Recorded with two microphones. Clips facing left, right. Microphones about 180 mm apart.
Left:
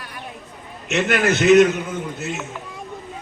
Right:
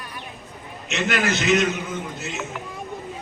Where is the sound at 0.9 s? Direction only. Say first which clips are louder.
Left 4 dB; 55° left (ahead or behind).